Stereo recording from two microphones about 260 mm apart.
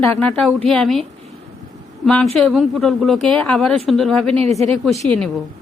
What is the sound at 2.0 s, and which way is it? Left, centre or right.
Speech, centre.